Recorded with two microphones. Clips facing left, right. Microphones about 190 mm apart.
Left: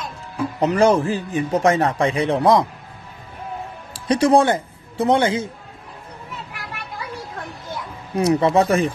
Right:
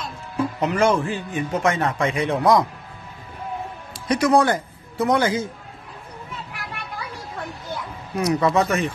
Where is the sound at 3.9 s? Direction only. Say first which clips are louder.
Left 3 dB; 30° left (ahead or behind).